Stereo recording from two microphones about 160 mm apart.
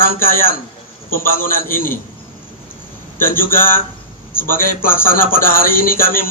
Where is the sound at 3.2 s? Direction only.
60° left (ahead or behind).